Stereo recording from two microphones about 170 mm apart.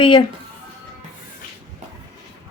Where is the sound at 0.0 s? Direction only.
30° left (ahead or behind).